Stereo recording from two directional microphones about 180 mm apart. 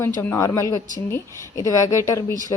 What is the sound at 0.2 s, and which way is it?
A woman's voice, 15° left (ahead or behind).